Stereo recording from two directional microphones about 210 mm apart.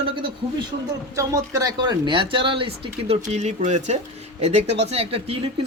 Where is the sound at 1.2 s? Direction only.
15° right (ahead or behind).